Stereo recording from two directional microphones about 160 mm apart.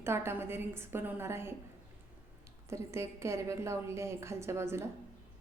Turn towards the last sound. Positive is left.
turn(degrees=-15)  # may be behind; listen again after turning